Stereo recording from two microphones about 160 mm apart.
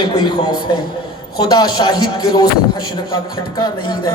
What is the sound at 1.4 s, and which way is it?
A man's voice, 25° left (ahead or behind).